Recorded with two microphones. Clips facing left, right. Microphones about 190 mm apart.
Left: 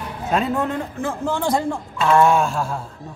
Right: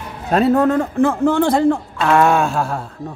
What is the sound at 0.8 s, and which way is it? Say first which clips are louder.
Speech: right 10 dB; 60° right (ahead or behind).